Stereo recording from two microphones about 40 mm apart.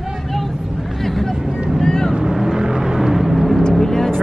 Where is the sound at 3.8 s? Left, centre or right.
Centre.